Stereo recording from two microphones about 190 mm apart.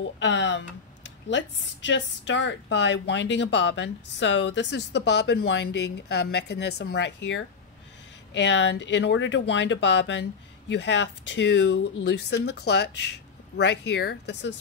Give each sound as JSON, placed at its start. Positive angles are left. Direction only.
{"t": 0.2, "sound": "a woman's voice", "side_deg": 70}